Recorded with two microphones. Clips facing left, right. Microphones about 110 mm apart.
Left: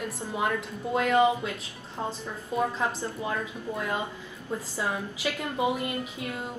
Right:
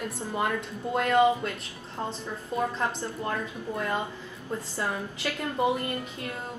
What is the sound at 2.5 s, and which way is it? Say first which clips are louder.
A woman's voice: left 1 dB; 10° left (ahead or behind).